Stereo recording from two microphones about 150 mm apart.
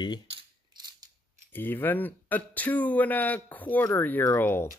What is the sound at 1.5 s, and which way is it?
Speech, 15° left (ahead or behind).